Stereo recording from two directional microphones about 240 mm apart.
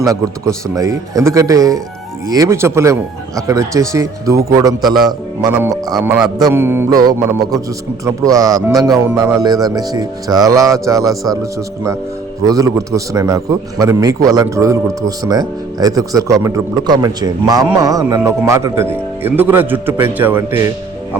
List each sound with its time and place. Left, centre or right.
0.0 s a man's voice: centre